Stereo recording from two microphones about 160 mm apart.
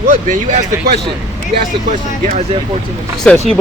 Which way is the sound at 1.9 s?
50° right (ahead or behind).